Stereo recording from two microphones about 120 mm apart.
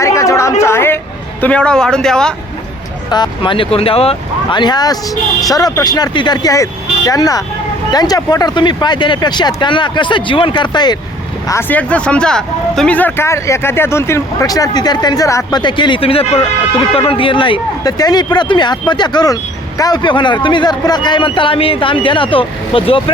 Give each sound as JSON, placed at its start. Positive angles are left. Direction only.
{"t": 0.0, "sound": "a sound", "side_deg": 25}
{"t": 1.4, "sound": "speech", "side_deg": 10}
{"t": 3.1, "sound": "speech", "side_deg": 40}
{"t": 4.5, "sound": "speech", "side_deg": 35}
{"t": 11.7, "sound": "speech", "side_deg": 10}
{"t": 17.9, "sound": "speech", "side_deg": 35}